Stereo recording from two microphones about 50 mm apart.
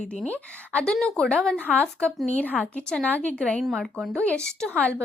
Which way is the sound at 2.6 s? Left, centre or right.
Centre.